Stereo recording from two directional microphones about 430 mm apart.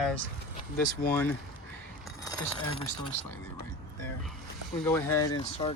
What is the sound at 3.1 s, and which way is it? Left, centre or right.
Speech, right.